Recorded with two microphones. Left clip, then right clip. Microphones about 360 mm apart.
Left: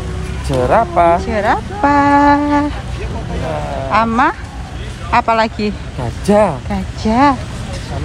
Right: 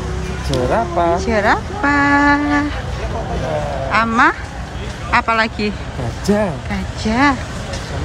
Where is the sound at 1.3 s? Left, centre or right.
Centre.